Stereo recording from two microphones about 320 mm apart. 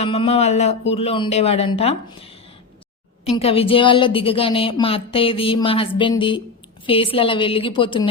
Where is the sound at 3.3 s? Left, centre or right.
Centre.